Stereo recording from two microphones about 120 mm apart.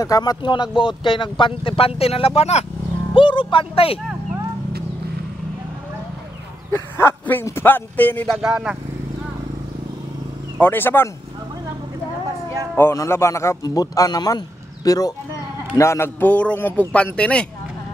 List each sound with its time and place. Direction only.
0.0 s speech: 30° left (ahead or behind); by 2.6 s 60° left (ahead or behind)
3.2 s speech: 45° left (ahead or behind)
6.7 s a man's voice: 20° left (ahead or behind)
8.5 s speech: 10° right (ahead or behind)
10.6 s a man's voice: 15° left (ahead or behind)
12.7 s a man's voice: 25° left (ahead or behind)